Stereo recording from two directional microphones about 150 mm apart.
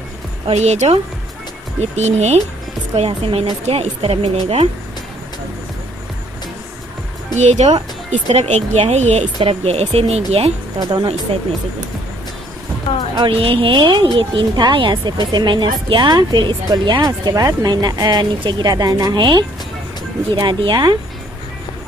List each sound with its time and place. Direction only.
0.5 s speech: 50° right (ahead or behind)
2.0 s speech: 50° right (ahead or behind)
7.3 s speech: 50° right (ahead or behind)
10.9 s speech: 30° right (ahead or behind)
13.2 s a woman's voice: 35° right (ahead or behind)